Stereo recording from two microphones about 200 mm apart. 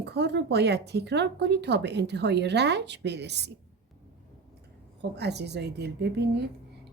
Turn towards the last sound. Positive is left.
turn(degrees=-55)  # may be behind; listen again after turning